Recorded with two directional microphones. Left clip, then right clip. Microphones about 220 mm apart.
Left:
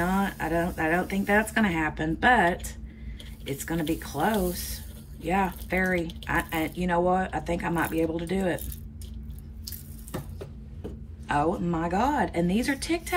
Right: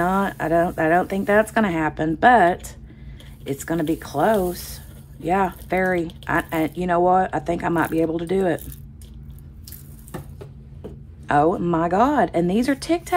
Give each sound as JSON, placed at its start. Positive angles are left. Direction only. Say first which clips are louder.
{"t": 0.0, "sound": "speech", "louder": "right 6 dB", "side_deg": -15}
{"t": 11.2, "sound": "speech", "louder": "right 8 dB", "side_deg": -25}